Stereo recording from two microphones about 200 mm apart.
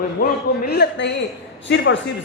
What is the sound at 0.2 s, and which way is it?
A woman's voice, 50° left (ahead or behind).